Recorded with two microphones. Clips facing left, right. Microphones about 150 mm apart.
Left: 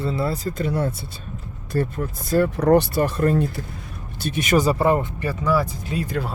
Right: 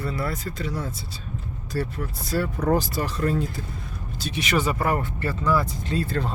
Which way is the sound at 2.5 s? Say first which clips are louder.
Left 5 dB; 75° left (ahead or behind).